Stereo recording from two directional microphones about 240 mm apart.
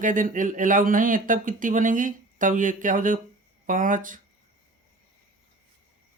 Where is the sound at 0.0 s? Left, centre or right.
Right.